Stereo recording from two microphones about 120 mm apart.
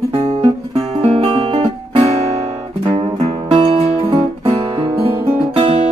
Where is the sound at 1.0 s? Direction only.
55° right (ahead or behind).